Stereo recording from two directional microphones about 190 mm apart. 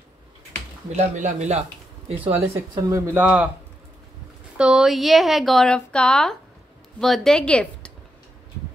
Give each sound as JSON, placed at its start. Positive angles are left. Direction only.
{"t": 0.9, "sound": "speech", "side_deg": -40}
{"t": 2.9, "sound": "speech", "side_deg": -10}
{"t": 4.6, "sound": "a woman's voice", "side_deg": -5}